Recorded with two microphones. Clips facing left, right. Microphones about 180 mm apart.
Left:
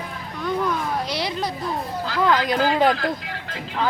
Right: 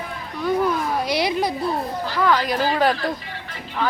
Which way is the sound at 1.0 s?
10° right (ahead or behind).